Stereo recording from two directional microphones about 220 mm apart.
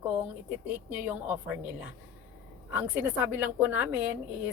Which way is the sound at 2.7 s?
10° right (ahead or behind).